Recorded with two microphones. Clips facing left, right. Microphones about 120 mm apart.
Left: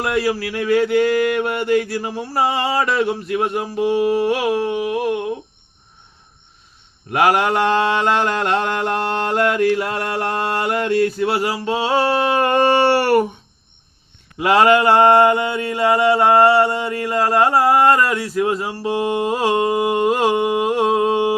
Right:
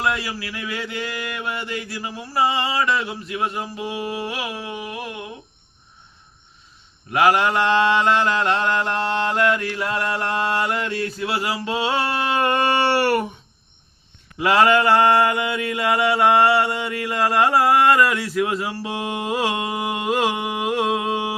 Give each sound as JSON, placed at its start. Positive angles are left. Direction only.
{"t": 0.0, "sound": "mantra", "side_deg": 55}
{"t": 7.1, "sound": "mantra", "side_deg": 45}
{"t": 14.3, "sound": "mantra", "side_deg": 45}
{"t": 14.9, "sound": "mantra", "side_deg": 25}
{"t": 19.5, "sound": "humming", "side_deg": 35}